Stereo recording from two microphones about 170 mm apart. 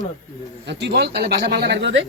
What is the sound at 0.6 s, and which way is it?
Speech, 85° right.